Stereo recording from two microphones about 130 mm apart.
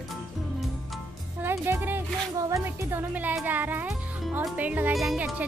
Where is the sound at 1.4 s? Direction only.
15° right (ahead or behind).